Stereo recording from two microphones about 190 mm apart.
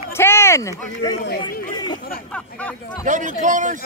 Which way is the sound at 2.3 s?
5° left (ahead or behind).